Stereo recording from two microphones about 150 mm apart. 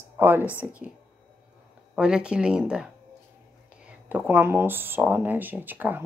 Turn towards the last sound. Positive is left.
turn(degrees=-10)  # may be behind; listen again after turning